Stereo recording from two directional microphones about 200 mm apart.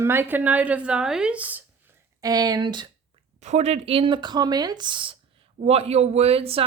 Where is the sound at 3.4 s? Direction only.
35° right (ahead or behind).